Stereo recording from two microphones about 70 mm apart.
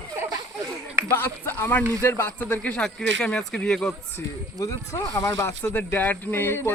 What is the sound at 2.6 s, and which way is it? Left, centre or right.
Speech, centre.